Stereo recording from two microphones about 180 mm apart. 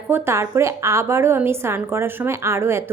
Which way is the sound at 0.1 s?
15° right (ahead or behind).